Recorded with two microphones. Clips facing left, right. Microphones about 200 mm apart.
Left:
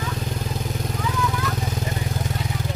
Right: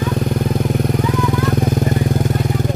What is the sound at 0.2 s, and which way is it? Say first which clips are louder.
Vehicle: right 11 dB; 60° right (ahead or behind).